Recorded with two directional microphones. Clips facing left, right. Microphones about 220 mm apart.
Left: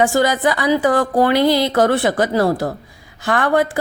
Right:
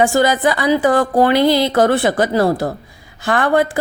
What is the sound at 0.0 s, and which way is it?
Speech, 25° right (ahead or behind).